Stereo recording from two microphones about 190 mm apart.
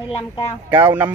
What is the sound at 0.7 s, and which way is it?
Speech, 10° right (ahead or behind).